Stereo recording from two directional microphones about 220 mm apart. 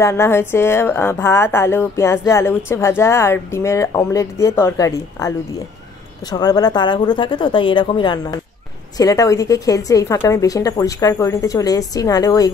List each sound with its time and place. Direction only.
0.0 s a woman's voice: 10° left (ahead or behind)
6.3 s a woman's voice: 20° left (ahead or behind)